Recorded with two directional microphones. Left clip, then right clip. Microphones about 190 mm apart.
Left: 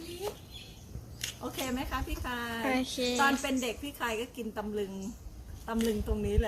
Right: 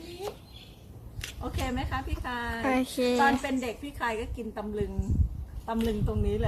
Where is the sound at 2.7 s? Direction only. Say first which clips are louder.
Right 4 dB; 20° right (ahead or behind).